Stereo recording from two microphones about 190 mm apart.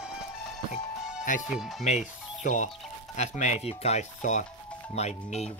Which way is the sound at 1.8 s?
40° left (ahead or behind).